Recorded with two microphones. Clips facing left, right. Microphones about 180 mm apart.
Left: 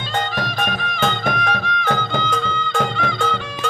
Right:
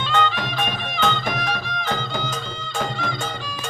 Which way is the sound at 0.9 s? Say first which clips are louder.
Left 1 dB; 50° left (ahead or behind).